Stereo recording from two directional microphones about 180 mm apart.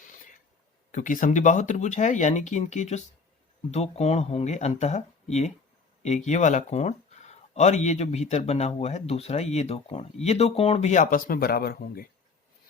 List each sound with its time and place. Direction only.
0.9 s speech: 45° left (ahead or behind)